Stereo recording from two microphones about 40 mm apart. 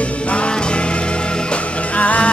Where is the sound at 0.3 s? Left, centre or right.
Left.